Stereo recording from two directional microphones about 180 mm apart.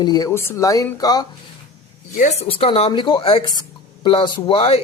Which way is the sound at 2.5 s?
30° left (ahead or behind).